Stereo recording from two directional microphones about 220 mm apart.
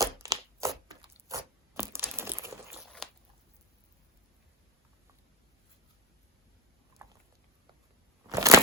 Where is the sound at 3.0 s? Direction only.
Centre (ahead or behind).